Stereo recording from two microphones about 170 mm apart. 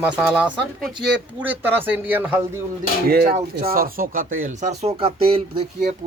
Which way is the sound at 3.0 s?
65° right (ahead or behind).